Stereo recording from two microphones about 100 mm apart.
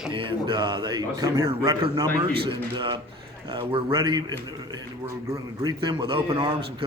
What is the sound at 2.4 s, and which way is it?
A man's voice, 55° right (ahead or behind).